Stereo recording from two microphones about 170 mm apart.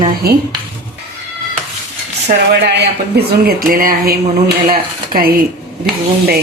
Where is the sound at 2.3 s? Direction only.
55° right (ahead or behind).